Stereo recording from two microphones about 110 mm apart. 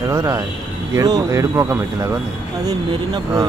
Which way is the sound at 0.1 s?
30° right (ahead or behind).